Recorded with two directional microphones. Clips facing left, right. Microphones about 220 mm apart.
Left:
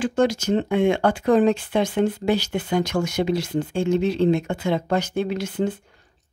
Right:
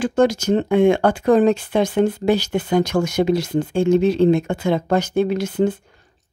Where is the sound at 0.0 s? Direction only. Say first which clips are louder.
Right 3 dB; 45° right (ahead or behind).